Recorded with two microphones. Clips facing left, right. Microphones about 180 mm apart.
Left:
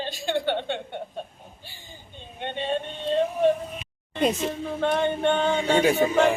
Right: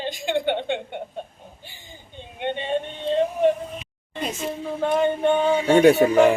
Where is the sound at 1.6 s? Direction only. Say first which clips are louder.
Right 1 dB; 15° right (ahead or behind).